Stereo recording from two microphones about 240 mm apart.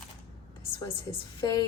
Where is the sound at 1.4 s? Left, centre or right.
Centre.